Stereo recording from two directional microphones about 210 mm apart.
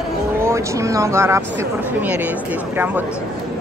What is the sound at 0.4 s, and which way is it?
Speech, 15° right (ahead or behind).